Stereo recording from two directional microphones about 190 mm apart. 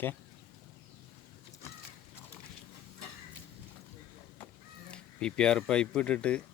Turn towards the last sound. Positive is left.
turn(degrees=5)  # may be behind; listen again after turning